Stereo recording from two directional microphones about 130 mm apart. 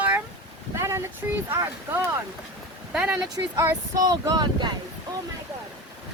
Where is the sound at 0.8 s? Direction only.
20° right (ahead or behind).